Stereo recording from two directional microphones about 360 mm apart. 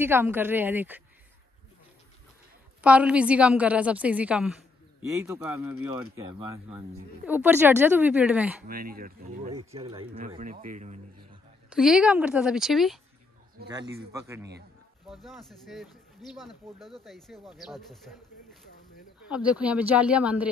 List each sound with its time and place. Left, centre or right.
0.0 s a woman's voice: centre
2.8 s a woman's voice: centre
8.6 s speech: right
11.7 s a woman's voice: centre
14.1 s a woman's voice: centre